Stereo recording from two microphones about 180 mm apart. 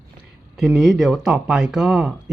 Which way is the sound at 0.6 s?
Centre (ahead or behind).